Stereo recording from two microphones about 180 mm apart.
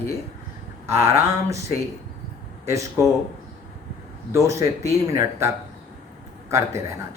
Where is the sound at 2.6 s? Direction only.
15° right (ahead or behind).